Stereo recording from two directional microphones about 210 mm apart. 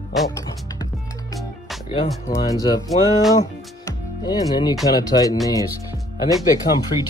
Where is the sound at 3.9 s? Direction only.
20° left (ahead or behind).